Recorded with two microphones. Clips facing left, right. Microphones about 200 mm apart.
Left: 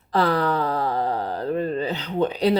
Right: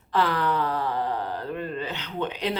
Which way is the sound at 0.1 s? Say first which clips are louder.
Left 4 dB; 35° left (ahead or behind).